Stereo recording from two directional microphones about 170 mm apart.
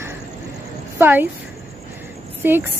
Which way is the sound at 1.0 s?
10° right (ahead or behind).